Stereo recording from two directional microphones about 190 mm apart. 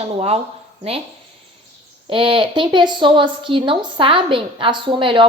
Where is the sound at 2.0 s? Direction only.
25° right (ahead or behind).